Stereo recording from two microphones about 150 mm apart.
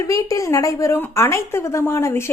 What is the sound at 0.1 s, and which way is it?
A woman's voice, 20° left (ahead or behind).